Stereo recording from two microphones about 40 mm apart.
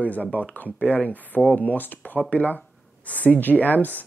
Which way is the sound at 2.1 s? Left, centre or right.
Left.